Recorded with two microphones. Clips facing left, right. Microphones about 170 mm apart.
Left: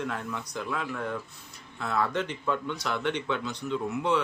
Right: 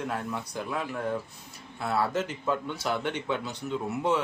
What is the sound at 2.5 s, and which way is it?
Speech, 40° right (ahead or behind).